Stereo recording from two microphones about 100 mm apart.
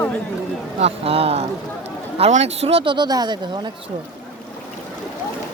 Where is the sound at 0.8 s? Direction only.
85° right; by 3.7 s 45° right (ahead or behind).